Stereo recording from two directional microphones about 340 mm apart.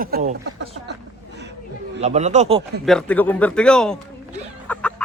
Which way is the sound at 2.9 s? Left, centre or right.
Centre.